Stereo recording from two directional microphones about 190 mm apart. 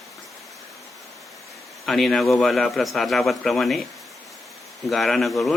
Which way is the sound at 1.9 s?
Centre (ahead or behind).